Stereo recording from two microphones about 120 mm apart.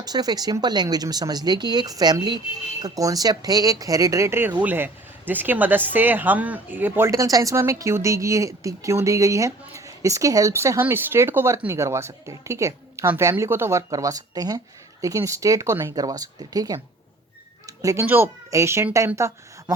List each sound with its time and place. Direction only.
0.0 s a woman's voice: 35° right (ahead or behind); by 7.1 s 15° right (ahead or behind)
7.1 s speech: 30° right (ahead or behind)
17.7 s a sound: 25° right (ahead or behind)
18.0 s a woman's voice: 15° right (ahead or behind)